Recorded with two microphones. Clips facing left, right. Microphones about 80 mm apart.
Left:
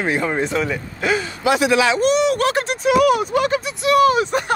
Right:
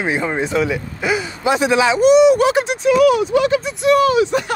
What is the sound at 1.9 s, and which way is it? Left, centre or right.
Speech, centre.